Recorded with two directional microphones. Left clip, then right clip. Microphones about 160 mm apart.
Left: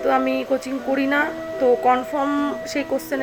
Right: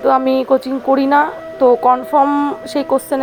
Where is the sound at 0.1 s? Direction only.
40° right (ahead or behind).